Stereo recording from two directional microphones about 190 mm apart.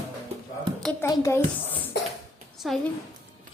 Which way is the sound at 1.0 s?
15° left (ahead or behind).